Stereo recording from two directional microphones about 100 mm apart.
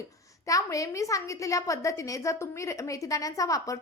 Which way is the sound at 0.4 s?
35° left (ahead or behind).